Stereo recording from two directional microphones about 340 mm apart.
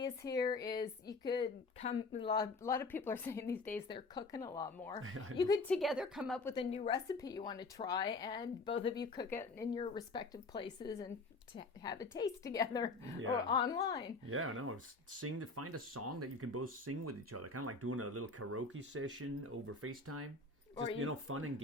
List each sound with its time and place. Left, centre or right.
0.0 s a woman's voice: centre
6.5 s speech: centre
14.3 s speech: right